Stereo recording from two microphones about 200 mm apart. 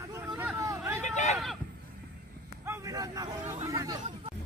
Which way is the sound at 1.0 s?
35° left (ahead or behind).